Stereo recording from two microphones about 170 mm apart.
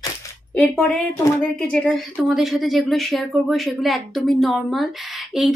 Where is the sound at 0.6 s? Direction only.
5° left (ahead or behind).